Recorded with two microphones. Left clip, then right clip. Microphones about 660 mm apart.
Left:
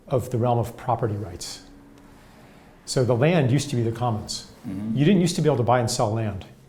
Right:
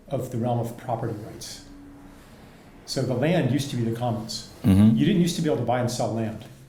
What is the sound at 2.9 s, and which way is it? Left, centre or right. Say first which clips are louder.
Speech: left 4 dB; left.